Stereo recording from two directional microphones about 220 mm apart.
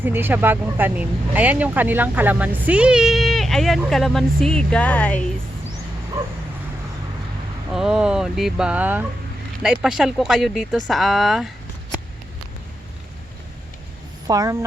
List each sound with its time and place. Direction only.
0.0 s speech: 10° right (ahead or behind); by 5.2 s 5° left (ahead or behind)
7.7 s speech: centre (ahead or behind)
14.3 s speech: 15° right (ahead or behind)